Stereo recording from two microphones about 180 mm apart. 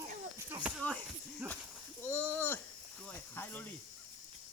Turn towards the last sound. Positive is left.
turn(degrees=10)  # may be behind; listen again after turning